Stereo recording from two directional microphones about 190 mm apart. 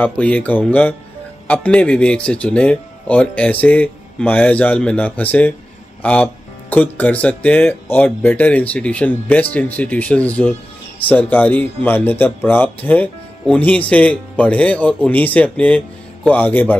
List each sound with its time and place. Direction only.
0.0 s speech: 5° left (ahead or behind)